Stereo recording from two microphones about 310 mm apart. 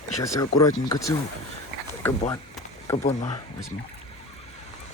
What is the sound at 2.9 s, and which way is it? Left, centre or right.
Speech, centre.